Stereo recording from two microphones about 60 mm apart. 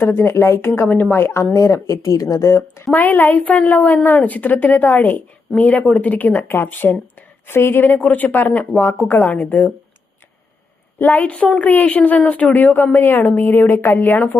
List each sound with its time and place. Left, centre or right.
0.0 s speech: left
0.8 s a woman's voice: left
1.1 s speech: left
1.5 s speech: left
2.9 s a woman's voice: left
11.1 s a woman's voice: left